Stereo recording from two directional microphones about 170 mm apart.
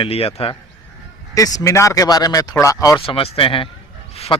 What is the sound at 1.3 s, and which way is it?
Speech, 20° left (ahead or behind).